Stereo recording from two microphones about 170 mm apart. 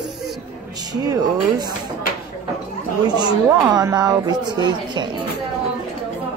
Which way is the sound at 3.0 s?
25° right (ahead or behind).